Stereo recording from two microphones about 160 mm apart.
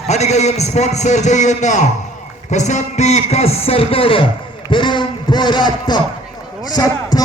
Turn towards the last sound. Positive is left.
turn(degrees=25)  # may be behind; listen again after turning